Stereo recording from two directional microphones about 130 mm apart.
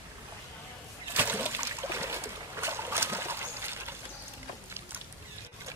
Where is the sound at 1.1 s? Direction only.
15° right (ahead or behind).